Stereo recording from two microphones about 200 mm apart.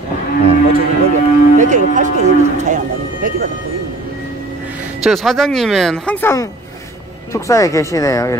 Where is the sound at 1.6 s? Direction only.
40° right (ahead or behind).